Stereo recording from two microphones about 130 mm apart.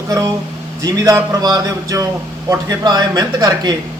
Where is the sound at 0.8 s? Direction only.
25° right (ahead or behind).